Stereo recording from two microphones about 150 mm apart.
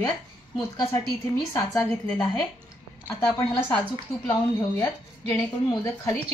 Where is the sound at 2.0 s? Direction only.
5° left (ahead or behind).